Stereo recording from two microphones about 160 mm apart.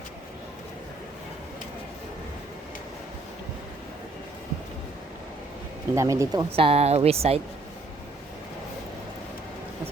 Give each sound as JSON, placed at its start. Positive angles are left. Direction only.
{"t": 5.9, "sound": "speech", "side_deg": -20}
{"t": 6.6, "sound": "speech", "side_deg": -40}